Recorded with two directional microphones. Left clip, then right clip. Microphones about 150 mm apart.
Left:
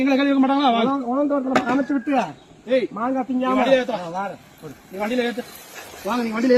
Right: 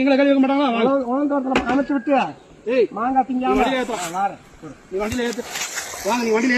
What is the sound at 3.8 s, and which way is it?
Speech, 50° left (ahead or behind).